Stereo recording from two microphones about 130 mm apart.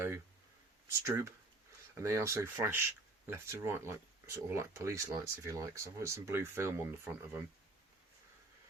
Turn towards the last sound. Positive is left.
turn(degrees=-20)  # may be behind; listen again after turning